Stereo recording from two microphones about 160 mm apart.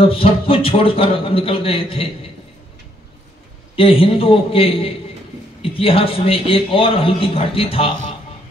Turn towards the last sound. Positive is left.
turn(degrees=35)  # may be behind; listen again after turning